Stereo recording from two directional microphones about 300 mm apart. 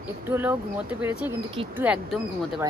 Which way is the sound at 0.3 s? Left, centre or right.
Centre.